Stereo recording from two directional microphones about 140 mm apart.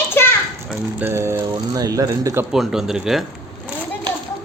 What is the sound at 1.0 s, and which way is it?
Speech, 15° right (ahead or behind).